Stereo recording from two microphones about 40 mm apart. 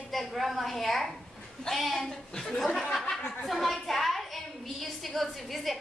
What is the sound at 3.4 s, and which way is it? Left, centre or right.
A woman's voice, centre.